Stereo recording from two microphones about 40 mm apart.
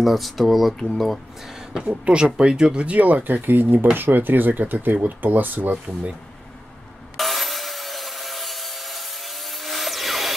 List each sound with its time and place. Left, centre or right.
0.0 s speech: centre
1.5 s speech: centre
1.9 s speech: right
2.8 s speech: right
7.2 s wood: centre